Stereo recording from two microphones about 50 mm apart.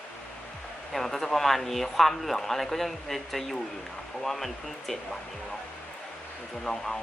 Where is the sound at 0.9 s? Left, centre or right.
Centre.